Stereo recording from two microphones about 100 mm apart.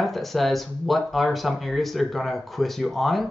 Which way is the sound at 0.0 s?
Centre (ahead or behind).